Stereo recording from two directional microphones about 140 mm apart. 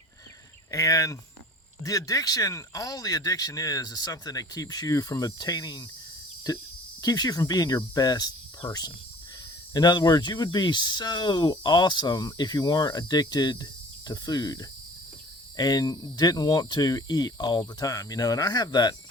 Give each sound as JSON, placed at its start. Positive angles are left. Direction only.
{"t": 0.7, "sound": "speech", "side_deg": 25}
{"t": 7.0, "sound": "speech", "side_deg": 25}